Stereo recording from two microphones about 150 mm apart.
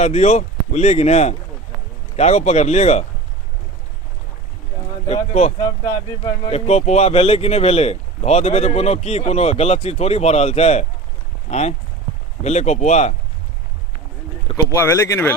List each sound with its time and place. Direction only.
0.0 s speech: 50° left (ahead or behind)
5.0 s speech: 45° left (ahead or behind)
12.4 s speech: 50° left (ahead or behind)
14.5 s speech: 20° left (ahead or behind)